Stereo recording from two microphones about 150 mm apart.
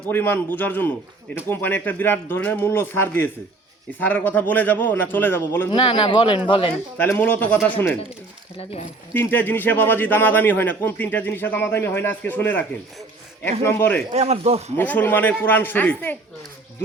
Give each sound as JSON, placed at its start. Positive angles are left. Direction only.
{"t": 0.1, "sound": "a man's voice", "side_deg": 15}
{"t": 5.7, "sound": "a man's voice", "side_deg": 30}
{"t": 7.0, "sound": "a man's voice", "side_deg": 15}
{"t": 9.3, "sound": "a man's voice", "side_deg": 10}
{"t": 13.7, "sound": "a man's voice", "side_deg": 15}
{"t": 14.1, "sound": "speech", "side_deg": -45}
{"t": 14.8, "sound": "a man's voice", "side_deg": 10}